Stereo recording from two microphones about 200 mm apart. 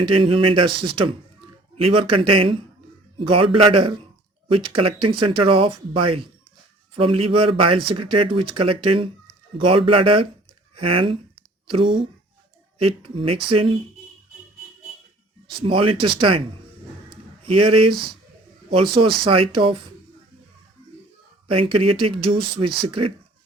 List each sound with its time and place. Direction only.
0.0 s speech: 25° right (ahead or behind)
15.4 s speech: 25° right (ahead or behind)
17.4 s speech: 30° right (ahead or behind)
21.4 s speech: 25° right (ahead or behind)